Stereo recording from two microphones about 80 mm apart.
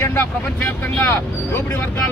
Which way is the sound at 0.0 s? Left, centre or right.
Left.